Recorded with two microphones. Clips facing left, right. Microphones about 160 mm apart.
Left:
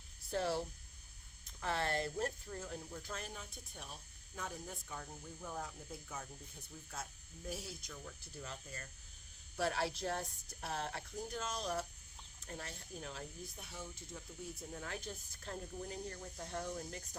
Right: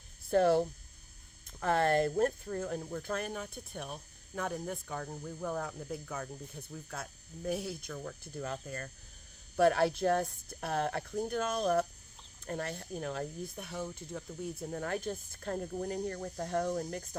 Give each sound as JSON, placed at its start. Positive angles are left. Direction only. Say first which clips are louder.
{"t": 0.3, "sound": "speech", "louder": "right 11 dB", "side_deg": -60}